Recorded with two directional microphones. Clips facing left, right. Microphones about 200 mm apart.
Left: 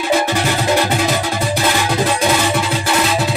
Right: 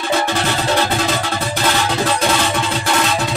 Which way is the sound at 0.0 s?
10° left (ahead or behind).